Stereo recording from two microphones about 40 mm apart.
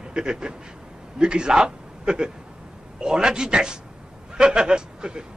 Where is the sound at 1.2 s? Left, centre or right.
Right.